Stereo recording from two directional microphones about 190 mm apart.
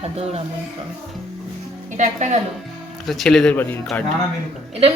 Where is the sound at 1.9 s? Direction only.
40° right (ahead or behind).